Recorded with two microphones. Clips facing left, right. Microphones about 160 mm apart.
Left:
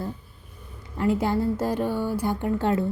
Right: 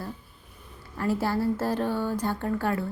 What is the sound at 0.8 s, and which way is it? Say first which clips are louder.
Speech: left 3 dB; 20° left (ahead or behind).